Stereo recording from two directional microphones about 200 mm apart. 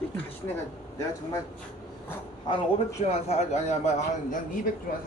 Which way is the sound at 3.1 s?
30° left (ahead or behind).